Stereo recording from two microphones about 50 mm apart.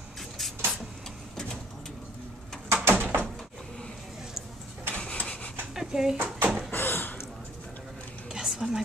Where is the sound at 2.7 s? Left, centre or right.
Right.